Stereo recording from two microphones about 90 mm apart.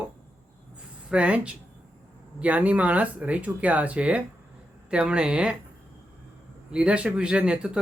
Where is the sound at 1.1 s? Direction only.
10° right (ahead or behind).